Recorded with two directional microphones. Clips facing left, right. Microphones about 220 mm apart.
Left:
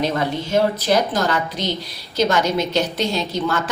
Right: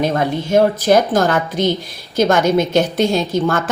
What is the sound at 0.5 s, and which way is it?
A woman's voice, 50° right (ahead or behind).